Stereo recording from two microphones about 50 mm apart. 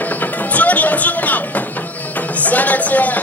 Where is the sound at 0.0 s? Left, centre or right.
Left.